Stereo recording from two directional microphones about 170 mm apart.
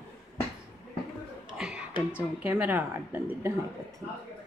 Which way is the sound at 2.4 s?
10° right (ahead or behind).